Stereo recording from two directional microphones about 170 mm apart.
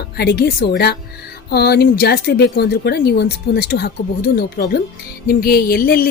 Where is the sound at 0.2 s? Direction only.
70° left (ahead or behind).